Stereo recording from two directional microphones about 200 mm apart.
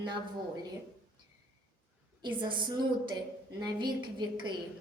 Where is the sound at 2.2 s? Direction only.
25° right (ahead or behind).